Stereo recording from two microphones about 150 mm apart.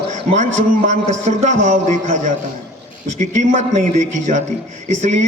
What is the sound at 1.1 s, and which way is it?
A man's voice, 55° right (ahead or behind).